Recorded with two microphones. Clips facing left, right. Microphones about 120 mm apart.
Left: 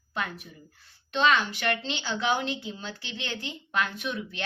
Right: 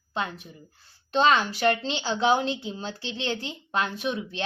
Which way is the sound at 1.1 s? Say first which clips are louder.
Right 3 dB; 35° right (ahead or behind).